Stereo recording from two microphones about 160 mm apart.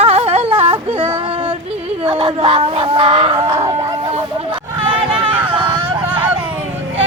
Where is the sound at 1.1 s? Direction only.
35° right (ahead or behind).